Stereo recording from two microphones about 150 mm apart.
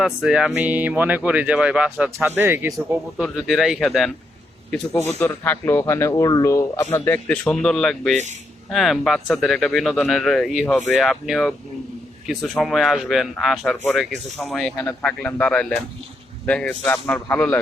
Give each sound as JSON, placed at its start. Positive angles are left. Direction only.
{"t": 0.0, "sound": "speech", "side_deg": -5}
{"t": 3.2, "sound": "speech", "side_deg": -5}
{"t": 4.9, "sound": "speech", "side_deg": 15}